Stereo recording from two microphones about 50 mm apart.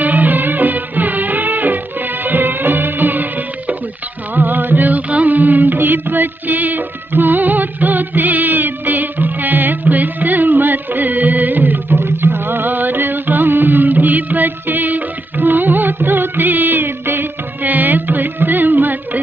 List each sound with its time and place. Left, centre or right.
0.0 s music: right